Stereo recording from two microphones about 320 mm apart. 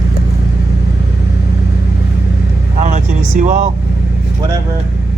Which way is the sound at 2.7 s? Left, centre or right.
Right.